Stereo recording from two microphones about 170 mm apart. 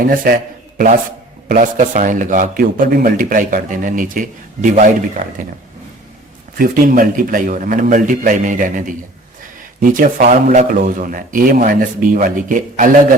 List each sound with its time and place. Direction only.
0.0 s a man's voice: 55° right (ahead or behind)
1.5 s a man's voice: 50° right (ahead or behind)
6.6 s a man's voice: 55° right (ahead or behind)
10.0 s a man's voice: 50° right (ahead or behind)